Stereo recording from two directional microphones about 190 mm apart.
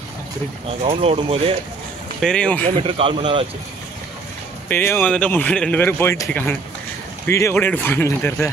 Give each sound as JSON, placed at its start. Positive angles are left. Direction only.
{"t": 0.8, "sound": "speech", "side_deg": -30}
{"t": 2.2, "sound": "speech", "side_deg": 5}
{"t": 2.8, "sound": "speech", "side_deg": -30}
{"t": 4.6, "sound": "speech", "side_deg": 10}